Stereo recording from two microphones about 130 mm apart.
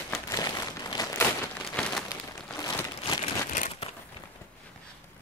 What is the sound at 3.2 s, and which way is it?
Crumpling, 55° left (ahead or behind).